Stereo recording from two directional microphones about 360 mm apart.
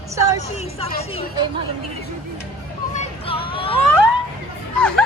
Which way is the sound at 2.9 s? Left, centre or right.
Centre.